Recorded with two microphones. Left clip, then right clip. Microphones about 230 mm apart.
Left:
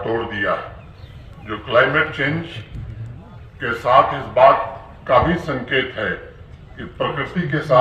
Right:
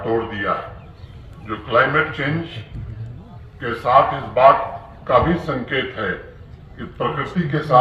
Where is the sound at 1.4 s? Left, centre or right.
Left.